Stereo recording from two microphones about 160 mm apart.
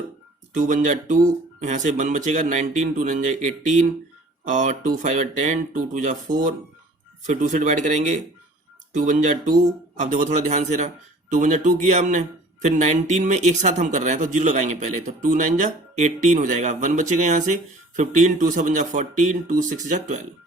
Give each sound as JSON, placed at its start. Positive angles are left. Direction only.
{"t": 0.5, "sound": "speech", "side_deg": -55}